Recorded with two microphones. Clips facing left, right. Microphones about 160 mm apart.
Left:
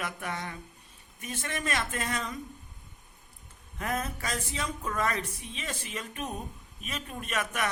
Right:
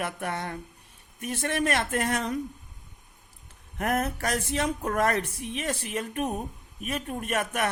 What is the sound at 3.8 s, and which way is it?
Speech, 65° right (ahead or behind).